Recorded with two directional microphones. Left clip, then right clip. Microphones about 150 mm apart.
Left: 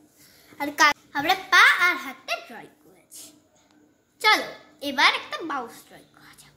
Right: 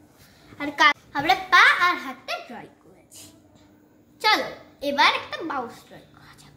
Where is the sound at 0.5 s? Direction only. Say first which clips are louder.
Right 1 dB; 50° left (ahead or behind).